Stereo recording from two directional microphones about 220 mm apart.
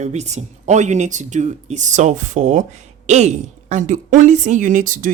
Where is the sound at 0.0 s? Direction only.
30° right (ahead or behind).